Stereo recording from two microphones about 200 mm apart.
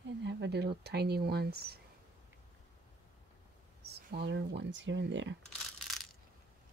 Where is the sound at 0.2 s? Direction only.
60° right (ahead or behind).